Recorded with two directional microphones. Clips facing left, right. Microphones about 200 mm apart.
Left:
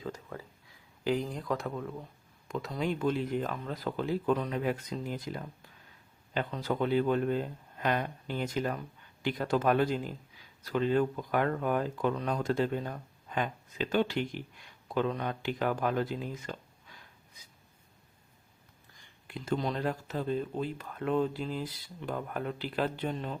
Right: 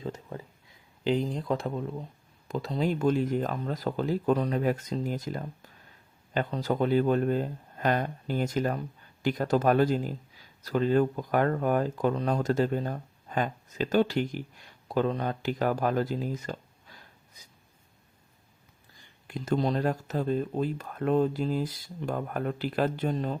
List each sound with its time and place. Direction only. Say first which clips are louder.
0.0 s a sound: right 3 dB; 25° right (ahead or behind)
1.0 s speech: right 4 dB; 25° right (ahead or behind)
19.3 s speech: right 5 dB; 40° right (ahead or behind)